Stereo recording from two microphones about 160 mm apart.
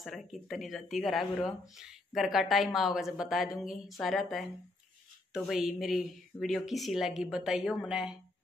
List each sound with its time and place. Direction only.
0.0 s speech: centre (ahead or behind)